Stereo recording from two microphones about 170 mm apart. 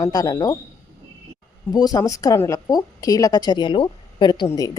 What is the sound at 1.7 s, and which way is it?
Speech, 20° left (ahead or behind).